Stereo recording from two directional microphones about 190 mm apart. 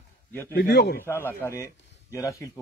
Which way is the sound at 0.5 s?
60° left (ahead or behind).